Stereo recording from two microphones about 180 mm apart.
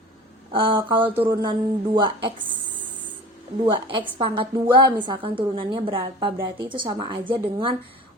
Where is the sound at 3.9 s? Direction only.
30° right (ahead or behind).